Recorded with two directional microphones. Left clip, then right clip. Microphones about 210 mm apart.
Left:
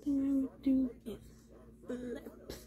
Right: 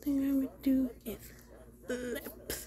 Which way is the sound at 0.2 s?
15° left (ahead or behind).